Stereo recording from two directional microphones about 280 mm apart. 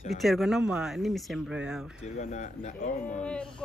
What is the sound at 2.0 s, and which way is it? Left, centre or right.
Speech, left.